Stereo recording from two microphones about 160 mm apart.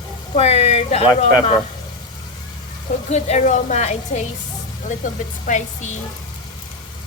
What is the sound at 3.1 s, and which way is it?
Speech, 45° left (ahead or behind).